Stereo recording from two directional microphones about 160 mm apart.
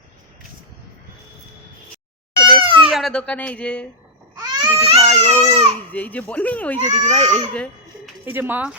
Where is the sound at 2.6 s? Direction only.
35° right (ahead or behind).